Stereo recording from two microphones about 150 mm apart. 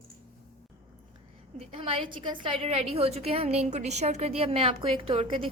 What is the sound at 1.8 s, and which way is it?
A woman's voice, 35° right (ahead or behind).